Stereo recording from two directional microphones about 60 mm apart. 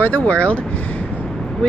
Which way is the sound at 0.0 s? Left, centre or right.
Left.